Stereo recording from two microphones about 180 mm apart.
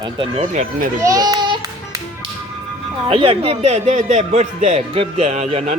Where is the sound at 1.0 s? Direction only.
20° right (ahead or behind).